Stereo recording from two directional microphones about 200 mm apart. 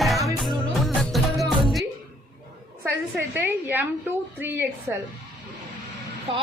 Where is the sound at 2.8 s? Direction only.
10° right (ahead or behind).